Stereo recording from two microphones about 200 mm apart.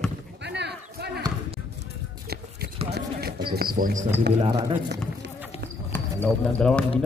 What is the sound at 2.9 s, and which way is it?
Run, 50° right (ahead or behind).